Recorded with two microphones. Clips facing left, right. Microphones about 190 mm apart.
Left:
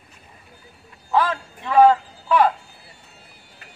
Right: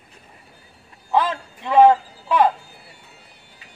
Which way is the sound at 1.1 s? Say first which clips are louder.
Even; 20° right (ahead or behind).